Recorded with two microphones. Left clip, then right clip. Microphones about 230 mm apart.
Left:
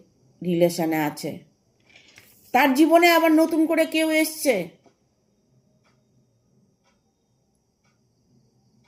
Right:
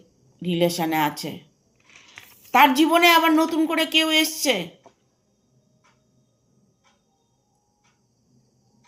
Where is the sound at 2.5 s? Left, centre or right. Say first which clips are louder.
Right 1 dB; right.